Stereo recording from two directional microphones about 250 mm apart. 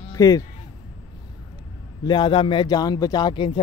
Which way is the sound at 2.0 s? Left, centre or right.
Centre.